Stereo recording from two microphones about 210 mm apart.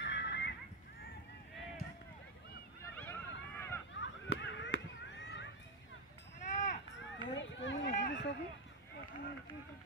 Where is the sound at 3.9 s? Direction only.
60° left (ahead or behind).